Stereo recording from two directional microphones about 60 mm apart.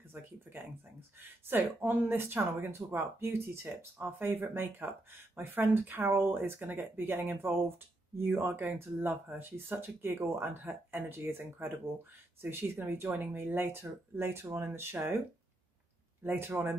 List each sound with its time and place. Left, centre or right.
1.2 s speech: right
16.2 s speech: right